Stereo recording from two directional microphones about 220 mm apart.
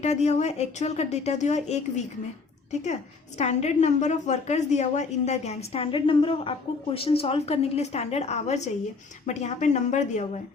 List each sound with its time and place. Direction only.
0.0 s a woman's voice: 30° left (ahead or behind)
2.8 s a woman's voice: 30° left (ahead or behind)